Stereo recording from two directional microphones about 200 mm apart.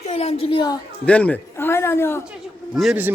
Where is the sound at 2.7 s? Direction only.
5° right (ahead or behind).